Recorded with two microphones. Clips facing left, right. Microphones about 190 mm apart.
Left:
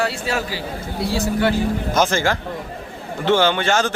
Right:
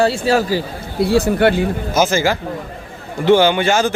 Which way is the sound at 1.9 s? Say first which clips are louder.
Right 4 dB; 5° right (ahead or behind).